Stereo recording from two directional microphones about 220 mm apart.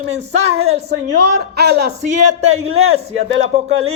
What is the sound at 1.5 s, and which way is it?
Speech, 50° right (ahead or behind).